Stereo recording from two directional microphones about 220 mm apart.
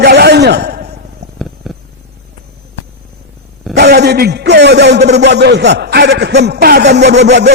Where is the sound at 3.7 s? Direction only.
50° right (ahead or behind).